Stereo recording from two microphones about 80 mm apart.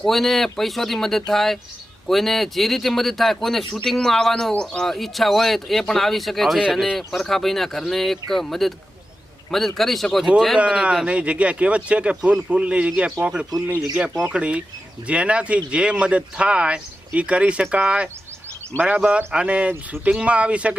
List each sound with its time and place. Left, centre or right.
0.0 s speech: centre
6.9 s speech: centre
10.6 s speech: centre